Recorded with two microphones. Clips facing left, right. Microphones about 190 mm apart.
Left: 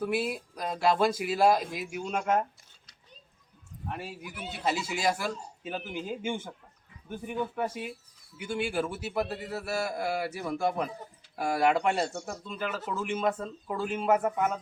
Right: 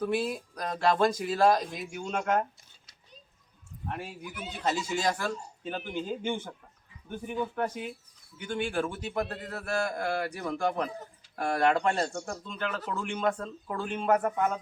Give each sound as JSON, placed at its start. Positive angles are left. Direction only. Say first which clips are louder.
{"t": 0.0, "sound": "a man's voice", "louder": "right 1 dB", "side_deg": 5}
{"t": 3.8, "sound": "a man's voice", "louder": "even", "side_deg": 5}